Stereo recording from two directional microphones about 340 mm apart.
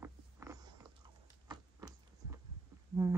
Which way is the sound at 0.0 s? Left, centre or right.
Centre.